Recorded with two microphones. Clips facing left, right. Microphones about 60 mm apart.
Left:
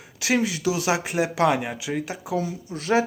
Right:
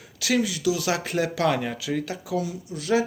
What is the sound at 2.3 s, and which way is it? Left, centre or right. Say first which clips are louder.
Speech: left 1 dB; left.